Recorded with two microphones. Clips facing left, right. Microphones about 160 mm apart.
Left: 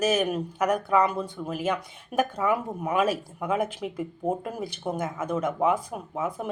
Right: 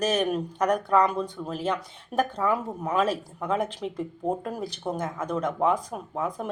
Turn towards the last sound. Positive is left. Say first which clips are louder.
# even
turn(degrees=5)  # may be behind; listen again after turning